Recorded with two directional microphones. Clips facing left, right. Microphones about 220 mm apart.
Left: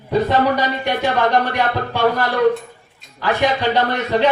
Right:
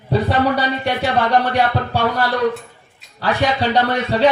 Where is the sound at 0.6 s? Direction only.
35° right (ahead or behind).